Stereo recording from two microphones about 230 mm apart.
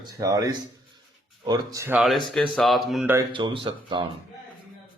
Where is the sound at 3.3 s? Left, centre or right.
Right.